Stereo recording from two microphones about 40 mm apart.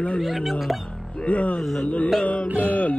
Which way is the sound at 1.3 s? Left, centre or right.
Left.